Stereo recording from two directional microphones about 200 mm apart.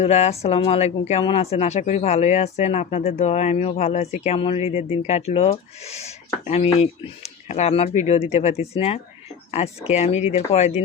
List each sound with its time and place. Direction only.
0.0 s speech: 30° left (ahead or behind)